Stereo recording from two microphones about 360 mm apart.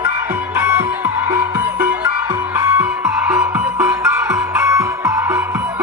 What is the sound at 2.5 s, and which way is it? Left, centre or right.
Music, centre.